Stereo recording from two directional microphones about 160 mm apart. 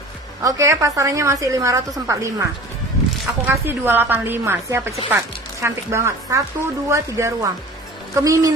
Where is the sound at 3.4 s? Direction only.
15° right (ahead or behind).